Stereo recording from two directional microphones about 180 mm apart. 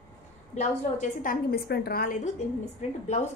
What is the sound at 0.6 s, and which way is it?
A woman's voice, 45° left (ahead or behind).